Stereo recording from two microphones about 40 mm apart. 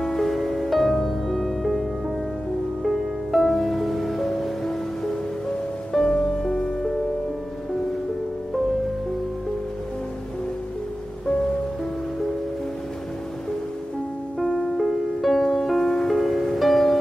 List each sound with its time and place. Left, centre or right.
0.0 s music: centre
14.4 s music: centre